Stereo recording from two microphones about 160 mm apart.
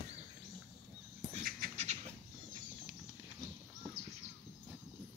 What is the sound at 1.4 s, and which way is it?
Beatboxing, 65° right (ahead or behind).